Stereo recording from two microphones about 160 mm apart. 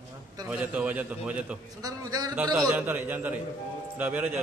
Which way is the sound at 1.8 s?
25° right (ahead or behind).